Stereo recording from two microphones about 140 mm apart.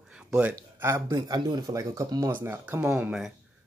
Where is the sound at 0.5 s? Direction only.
20° right (ahead or behind).